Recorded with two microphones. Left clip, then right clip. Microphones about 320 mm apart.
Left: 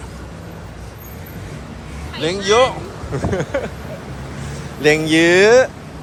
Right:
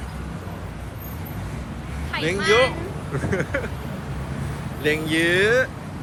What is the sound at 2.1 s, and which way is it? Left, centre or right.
Speech, centre.